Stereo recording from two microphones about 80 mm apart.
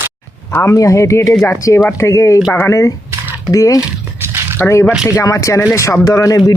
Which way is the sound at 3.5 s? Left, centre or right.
Left.